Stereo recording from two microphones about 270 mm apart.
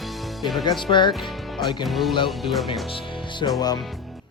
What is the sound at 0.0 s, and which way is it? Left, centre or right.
Music, centre.